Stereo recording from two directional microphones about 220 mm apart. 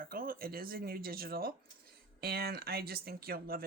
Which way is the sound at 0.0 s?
40° right (ahead or behind).